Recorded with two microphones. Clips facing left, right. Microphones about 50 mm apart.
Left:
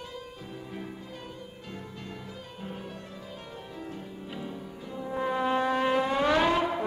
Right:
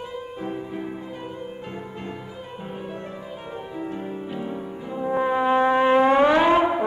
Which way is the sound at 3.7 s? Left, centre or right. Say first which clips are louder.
Right 11 dB; right.